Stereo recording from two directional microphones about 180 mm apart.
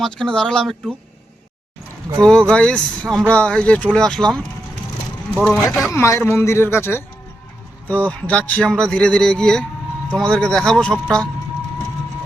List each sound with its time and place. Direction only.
0.0 s speech: 5° left (ahead or behind)
2.2 s speech: 5° left (ahead or behind)
5.9 s speech: 15° left (ahead or behind)